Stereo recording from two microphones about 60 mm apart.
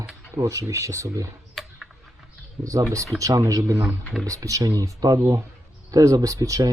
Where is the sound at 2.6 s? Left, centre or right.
Right.